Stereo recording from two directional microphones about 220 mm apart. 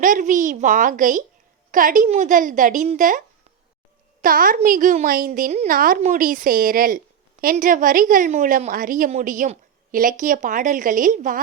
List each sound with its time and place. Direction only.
0.0 s a woman's voice: 35° right (ahead or behind)